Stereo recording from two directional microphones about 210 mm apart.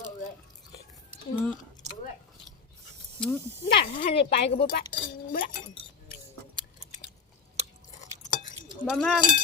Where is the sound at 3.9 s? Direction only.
40° left (ahead or behind).